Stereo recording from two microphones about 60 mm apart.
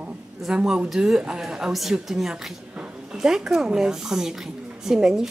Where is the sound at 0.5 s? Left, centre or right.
Centre.